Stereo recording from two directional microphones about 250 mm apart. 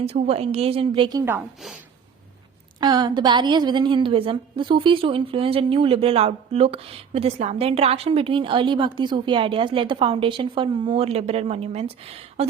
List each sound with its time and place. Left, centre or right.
0.0 s a woman's voice: right; by 1.8 s centre
2.8 s a woman's voice: centre